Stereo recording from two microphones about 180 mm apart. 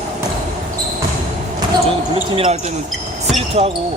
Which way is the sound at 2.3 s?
30° right (ahead or behind).